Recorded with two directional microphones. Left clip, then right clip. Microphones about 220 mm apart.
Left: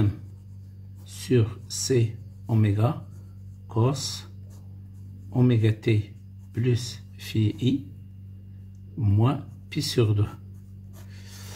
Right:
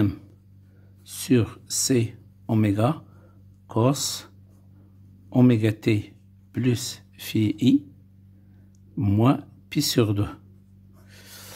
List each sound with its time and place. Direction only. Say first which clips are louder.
1.0 s speech: right 2 dB; 50° right (ahead or behind)
5.3 s speech: right 5 dB; 45° right (ahead or behind)
9.0 s speech: right 6 dB; 45° right (ahead or behind)
11.1 s snort: right 3 dB; 45° right (ahead or behind)